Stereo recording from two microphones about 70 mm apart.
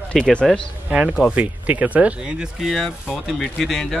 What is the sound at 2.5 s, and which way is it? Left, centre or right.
Speech, centre.